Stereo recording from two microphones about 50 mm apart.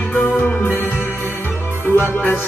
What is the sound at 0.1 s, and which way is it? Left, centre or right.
Music, left.